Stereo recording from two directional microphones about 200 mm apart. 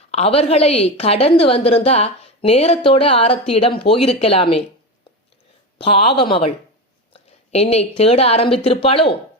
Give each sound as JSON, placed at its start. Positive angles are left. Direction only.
{"t": 0.1, "sound": "a woman's voice", "side_deg": 30}
{"t": 5.8, "sound": "a woman's voice", "side_deg": 30}